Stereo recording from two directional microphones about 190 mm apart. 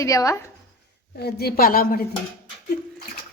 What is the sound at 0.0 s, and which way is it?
Speech, 15° left (ahead or behind).